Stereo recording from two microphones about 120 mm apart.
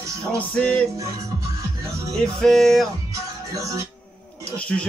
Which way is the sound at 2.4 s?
Centre (ahead or behind).